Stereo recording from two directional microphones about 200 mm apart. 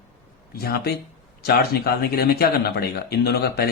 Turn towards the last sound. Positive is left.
turn(degrees=50)  # may be behind; listen again after turning